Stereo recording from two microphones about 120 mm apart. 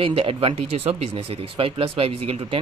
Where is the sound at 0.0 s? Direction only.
50° right (ahead or behind).